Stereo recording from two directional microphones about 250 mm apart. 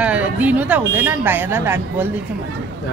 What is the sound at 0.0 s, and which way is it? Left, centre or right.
A woman's voice, centre.